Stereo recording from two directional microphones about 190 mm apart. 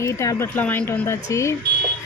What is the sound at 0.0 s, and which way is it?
Speech, 15° left (ahead or behind).